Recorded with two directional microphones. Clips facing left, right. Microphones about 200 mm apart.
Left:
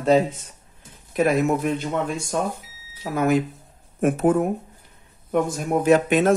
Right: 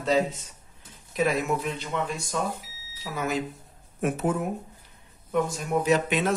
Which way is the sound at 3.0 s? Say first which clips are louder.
Left 8 dB; 55° left (ahead or behind).